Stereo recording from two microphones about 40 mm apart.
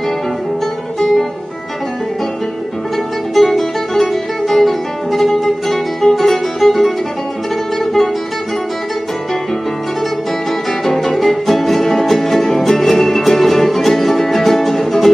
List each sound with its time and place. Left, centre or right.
0.9 s music: centre
3.3 s music: centre
10.9 s music: centre